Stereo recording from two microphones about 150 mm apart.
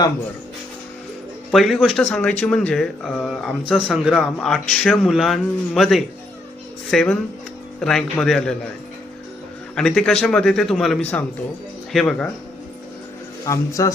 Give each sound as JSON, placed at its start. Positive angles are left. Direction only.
{"t": 1.5, "sound": "speech", "side_deg": 0}
{"t": 9.7, "sound": "speech", "side_deg": 5}
{"t": 13.4, "sound": "a man's voice", "side_deg": 20}